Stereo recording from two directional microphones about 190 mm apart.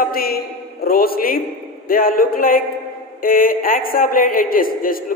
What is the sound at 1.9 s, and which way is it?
A woman's voice, 50° left (ahead or behind).